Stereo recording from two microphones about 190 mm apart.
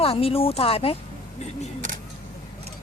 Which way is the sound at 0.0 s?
30° left (ahead or behind).